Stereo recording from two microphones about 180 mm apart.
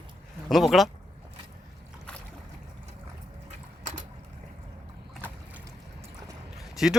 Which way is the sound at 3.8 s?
45° right (ahead or behind).